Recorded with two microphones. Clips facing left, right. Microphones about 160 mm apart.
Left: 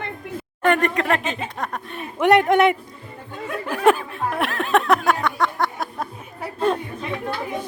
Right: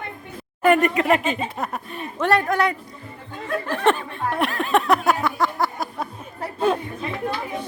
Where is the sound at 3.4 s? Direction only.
10° left (ahead or behind).